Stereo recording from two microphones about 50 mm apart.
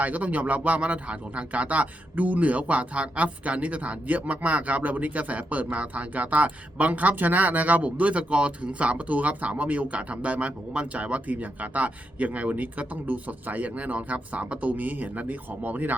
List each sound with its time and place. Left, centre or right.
0.0 s speech: right